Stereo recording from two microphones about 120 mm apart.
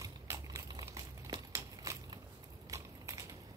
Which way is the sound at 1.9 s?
25° right (ahead or behind).